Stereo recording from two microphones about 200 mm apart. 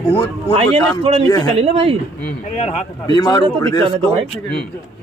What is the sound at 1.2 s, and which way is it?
Speech, 20° left (ahead or behind).